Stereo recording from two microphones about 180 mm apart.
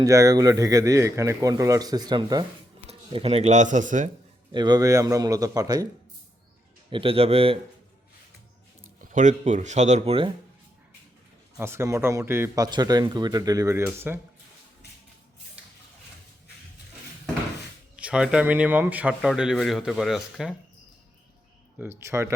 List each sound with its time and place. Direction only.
0.0 s a man's voice: 20° right (ahead or behind); by 4.1 s 45° right (ahead or behind)
4.5 s a man's voice: 25° right (ahead or behind)
6.9 s speech: 30° right (ahead or behind)
9.0 s a sound: 45° right (ahead or behind)
9.4 s speech: 40° right (ahead or behind)
11.6 s speech: 15° right (ahead or behind)
17.9 s speech: 5° right (ahead or behind)
21.8 s speech: 15° right (ahead or behind)